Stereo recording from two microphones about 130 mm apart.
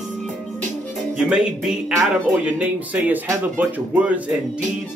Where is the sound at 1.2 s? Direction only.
5° right (ahead or behind).